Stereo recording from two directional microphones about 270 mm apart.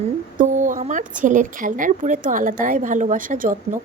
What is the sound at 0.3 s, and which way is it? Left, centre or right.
Speech, right.